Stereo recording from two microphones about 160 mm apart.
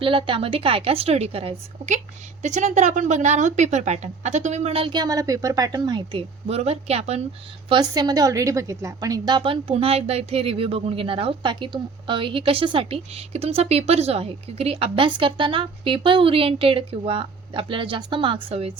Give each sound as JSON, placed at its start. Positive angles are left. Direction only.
{"t": 0.0, "sound": "a woman's voice", "side_deg": -35}
{"t": 7.7, "sound": "a woman's voice", "side_deg": -25}